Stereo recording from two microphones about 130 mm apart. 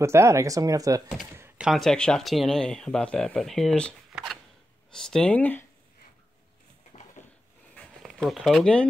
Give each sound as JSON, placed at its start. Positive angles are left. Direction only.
{"t": 0.0, "sound": "speech", "side_deg": -20}
{"t": 1.6, "sound": "speech", "side_deg": 0}
{"t": 4.1, "sound": "a sound", "side_deg": 0}
{"t": 4.9, "sound": "speech", "side_deg": 5}
{"t": 7.2, "sound": "dog", "side_deg": 65}
{"t": 7.7, "sound": "a sound", "side_deg": 5}